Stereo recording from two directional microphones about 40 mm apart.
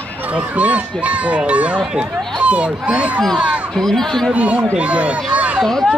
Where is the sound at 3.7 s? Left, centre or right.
Centre.